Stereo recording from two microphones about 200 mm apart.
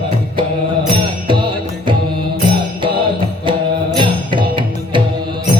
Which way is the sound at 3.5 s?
25° right (ahead or behind).